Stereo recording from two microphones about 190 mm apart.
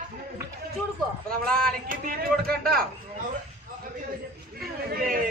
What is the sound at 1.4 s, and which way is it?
Speech, 5° left (ahead or behind).